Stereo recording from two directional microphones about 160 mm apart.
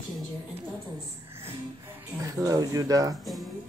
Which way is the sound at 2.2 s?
20° right (ahead or behind).